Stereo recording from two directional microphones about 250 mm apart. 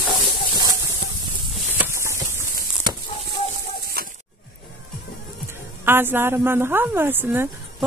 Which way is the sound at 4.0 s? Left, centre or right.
Right.